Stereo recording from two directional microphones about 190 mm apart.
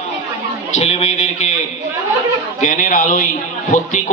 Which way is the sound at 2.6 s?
45° left (ahead or behind).